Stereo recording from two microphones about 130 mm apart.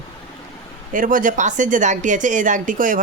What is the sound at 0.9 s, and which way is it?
Speech, 90° right.